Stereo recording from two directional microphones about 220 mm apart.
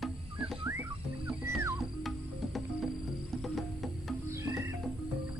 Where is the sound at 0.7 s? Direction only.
10° right (ahead or behind).